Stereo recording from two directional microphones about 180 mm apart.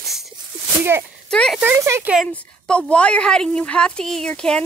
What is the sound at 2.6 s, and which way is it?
Speech, 5° left (ahead or behind).